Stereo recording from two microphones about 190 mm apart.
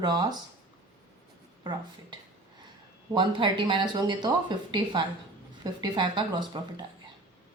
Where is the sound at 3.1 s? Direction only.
25° right (ahead or behind).